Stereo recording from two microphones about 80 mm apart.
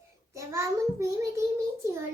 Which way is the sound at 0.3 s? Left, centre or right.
Right.